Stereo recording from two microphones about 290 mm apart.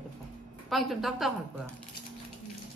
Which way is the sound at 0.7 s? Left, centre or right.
Centre.